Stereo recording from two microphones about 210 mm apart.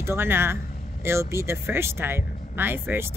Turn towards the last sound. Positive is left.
turn(degrees=-10)  # may be behind; listen again after turning